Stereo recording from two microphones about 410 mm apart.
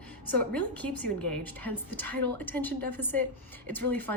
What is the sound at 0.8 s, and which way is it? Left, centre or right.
Speech, left.